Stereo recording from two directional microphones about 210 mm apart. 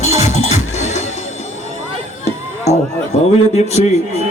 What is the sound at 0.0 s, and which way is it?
Music, 35° left (ahead or behind).